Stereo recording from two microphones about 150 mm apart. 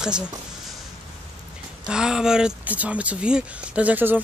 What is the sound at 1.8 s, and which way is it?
Speech, 5° right (ahead or behind).